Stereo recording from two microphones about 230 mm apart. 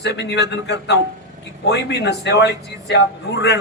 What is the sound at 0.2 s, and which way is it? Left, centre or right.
Speech, left.